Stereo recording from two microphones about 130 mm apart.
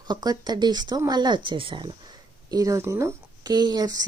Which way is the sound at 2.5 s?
25° right (ahead or behind).